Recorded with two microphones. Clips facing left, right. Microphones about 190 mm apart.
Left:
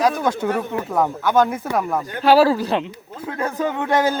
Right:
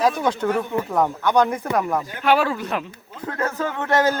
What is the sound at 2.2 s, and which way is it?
Speech, 35° left (ahead or behind).